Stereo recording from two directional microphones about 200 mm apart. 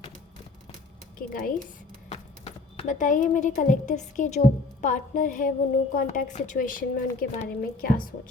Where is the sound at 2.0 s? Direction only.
30° left (ahead or behind).